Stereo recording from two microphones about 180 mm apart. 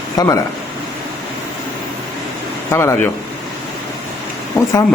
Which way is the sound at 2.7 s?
15° left (ahead or behind).